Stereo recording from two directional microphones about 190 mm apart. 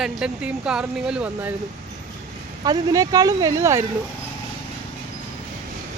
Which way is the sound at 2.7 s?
20° right (ahead or behind).